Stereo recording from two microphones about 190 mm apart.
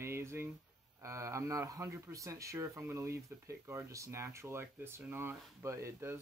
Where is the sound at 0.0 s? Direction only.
15° right (ahead or behind).